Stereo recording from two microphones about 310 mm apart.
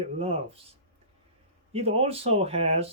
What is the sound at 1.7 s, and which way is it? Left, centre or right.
Speech, centre.